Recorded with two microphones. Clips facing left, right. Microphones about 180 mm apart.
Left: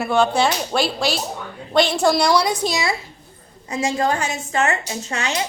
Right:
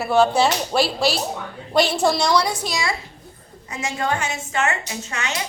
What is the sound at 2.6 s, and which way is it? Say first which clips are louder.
A woman's voice: left 3 dB; 25° left (ahead or behind).